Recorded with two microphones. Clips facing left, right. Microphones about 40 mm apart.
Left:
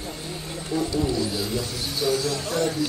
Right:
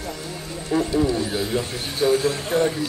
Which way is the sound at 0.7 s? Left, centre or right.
Right.